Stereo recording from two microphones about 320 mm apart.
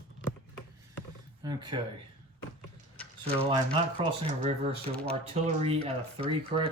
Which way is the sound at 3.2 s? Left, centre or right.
Centre.